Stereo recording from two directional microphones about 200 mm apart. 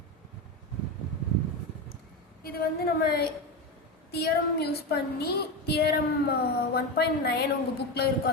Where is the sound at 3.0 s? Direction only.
55° left (ahead or behind).